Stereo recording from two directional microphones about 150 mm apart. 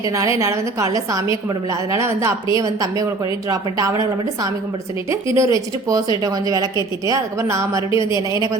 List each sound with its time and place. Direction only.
0.2 s a woman's voice: 20° right (ahead or behind)
5.4 s a woman's voice: 20° right (ahead or behind)